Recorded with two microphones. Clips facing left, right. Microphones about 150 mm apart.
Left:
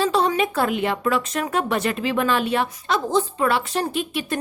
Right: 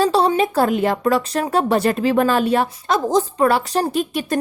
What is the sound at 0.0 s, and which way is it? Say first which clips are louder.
Speech: right 4 dB; 35° right (ahead or behind).